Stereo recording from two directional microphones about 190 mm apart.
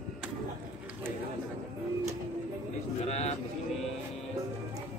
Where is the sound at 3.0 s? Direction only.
35° left (ahead or behind).